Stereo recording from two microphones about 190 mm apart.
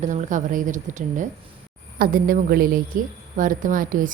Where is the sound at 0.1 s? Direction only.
40° right (ahead or behind).